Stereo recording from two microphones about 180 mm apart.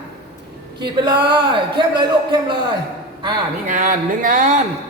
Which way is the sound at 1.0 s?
25° right (ahead or behind).